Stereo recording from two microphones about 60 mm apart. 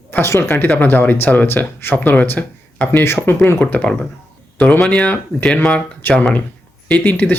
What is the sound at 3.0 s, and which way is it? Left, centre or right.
Speech, left.